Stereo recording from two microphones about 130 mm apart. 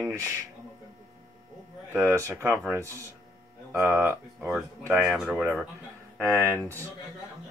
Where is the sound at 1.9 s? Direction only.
20° right (ahead or behind).